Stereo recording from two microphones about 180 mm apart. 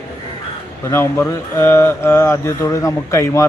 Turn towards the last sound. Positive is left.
turn(degrees=15)  # may be behind; listen again after turning